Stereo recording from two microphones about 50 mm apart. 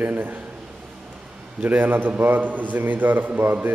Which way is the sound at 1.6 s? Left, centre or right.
Right.